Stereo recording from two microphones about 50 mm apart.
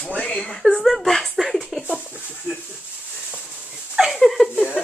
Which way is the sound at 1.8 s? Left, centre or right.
Right.